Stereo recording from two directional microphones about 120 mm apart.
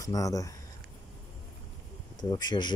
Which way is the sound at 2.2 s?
35° left (ahead or behind).